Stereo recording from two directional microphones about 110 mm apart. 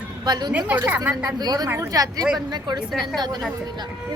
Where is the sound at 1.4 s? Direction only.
40° right (ahead or behind).